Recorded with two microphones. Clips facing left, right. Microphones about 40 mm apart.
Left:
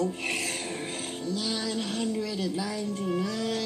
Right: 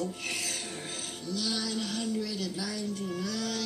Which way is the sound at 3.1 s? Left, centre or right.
Left.